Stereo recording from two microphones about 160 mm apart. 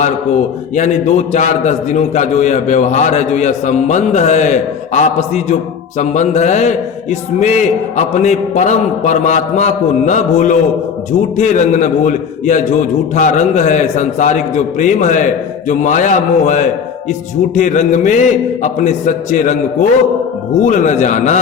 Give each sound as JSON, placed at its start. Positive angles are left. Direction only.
{"t": 0.8, "sound": "a man's voice", "side_deg": 45}